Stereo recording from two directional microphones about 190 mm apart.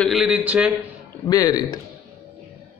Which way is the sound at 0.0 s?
Centre (ahead or behind).